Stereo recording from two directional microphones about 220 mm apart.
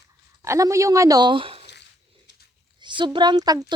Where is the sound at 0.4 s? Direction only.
15° right (ahead or behind).